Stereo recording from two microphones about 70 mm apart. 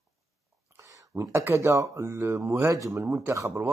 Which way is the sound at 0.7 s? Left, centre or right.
Right.